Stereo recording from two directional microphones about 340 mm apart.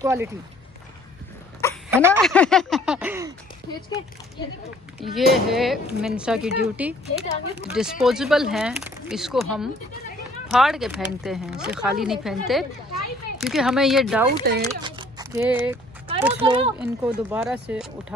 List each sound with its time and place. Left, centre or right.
0.0 s speech: centre
1.9 s speech: centre
5.0 s speech: centre
14.4 s speech: right
14.8 s speech: centre